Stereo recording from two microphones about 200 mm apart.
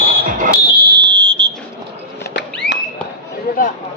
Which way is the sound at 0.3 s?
45° right (ahead or behind).